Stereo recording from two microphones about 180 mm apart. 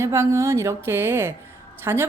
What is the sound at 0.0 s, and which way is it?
A woman's voice, 15° right (ahead or behind).